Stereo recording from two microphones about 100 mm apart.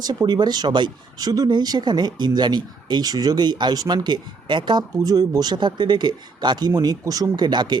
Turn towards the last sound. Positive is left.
turn(degrees=-50)  # may be behind; listen again after turning